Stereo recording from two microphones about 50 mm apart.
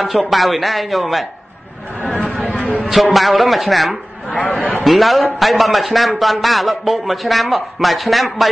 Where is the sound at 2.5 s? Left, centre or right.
Left.